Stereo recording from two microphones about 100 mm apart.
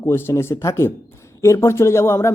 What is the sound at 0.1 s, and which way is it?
Speech, 25° left (ahead or behind).